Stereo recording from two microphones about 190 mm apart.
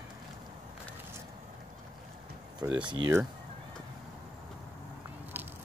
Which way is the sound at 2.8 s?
20° right (ahead or behind).